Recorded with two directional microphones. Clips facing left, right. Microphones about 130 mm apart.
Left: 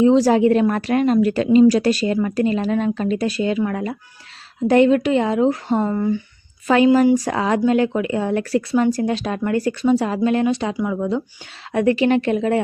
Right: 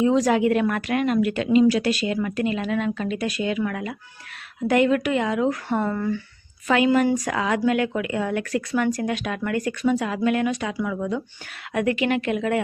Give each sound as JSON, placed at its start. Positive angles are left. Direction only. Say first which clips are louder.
{"t": 0.0, "sound": "a woman's voice", "louder": "left 5 dB", "side_deg": 30}
{"t": 5.6, "sound": "a woman's voice", "louder": "left 4 dB", "side_deg": 20}
{"t": 6.7, "sound": "a woman's voice", "louder": "left 5 dB", "side_deg": 35}